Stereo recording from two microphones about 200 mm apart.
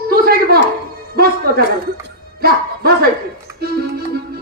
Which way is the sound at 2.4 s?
50° right (ahead or behind).